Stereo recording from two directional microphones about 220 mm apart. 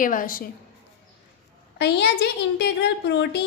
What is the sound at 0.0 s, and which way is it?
Speech, 40° left (ahead or behind).